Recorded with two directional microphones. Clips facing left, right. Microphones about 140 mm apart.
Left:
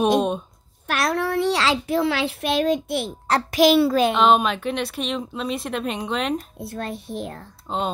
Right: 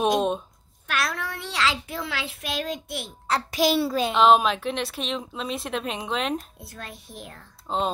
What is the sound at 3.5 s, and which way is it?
Speech, 85° left.